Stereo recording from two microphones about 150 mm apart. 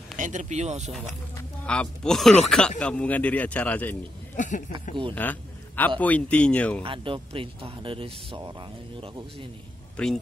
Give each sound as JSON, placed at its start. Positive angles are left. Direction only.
{"t": 0.2, "sound": "speech", "side_deg": -55}
{"t": 1.7, "sound": "speech", "side_deg": 5}
{"t": 4.4, "sound": "speech", "side_deg": 55}
{"t": 5.1, "sound": "a man's voice", "side_deg": 10}
{"t": 6.8, "sound": "speech", "side_deg": -35}
{"t": 10.0, "sound": "speech", "side_deg": 5}